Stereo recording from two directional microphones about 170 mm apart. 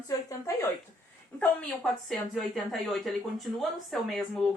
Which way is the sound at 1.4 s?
5° left (ahead or behind).